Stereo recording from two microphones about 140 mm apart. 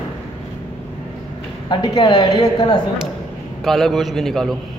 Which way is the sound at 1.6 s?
30° left (ahead or behind).